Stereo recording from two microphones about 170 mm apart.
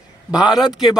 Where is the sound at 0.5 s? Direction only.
Centre (ahead or behind).